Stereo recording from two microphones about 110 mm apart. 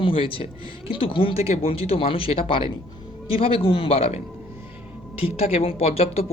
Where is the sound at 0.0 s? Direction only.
55° left (ahead or behind).